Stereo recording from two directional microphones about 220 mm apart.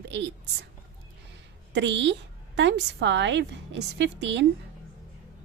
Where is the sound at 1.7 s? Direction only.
55° right (ahead or behind).